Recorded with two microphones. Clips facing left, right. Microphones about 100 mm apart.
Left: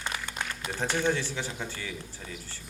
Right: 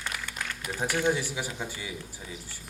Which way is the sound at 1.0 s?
15° right (ahead or behind).